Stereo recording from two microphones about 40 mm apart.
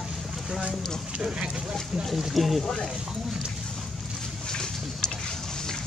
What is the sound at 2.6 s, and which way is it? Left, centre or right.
Speech, centre.